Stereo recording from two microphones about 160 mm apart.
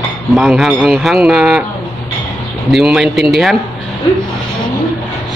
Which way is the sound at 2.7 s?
Centre (ahead or behind).